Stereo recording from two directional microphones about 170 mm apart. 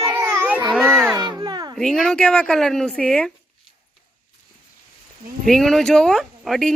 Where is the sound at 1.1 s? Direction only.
25° right (ahead or behind).